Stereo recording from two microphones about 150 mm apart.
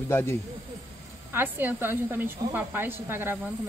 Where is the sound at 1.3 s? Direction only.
15° right (ahead or behind).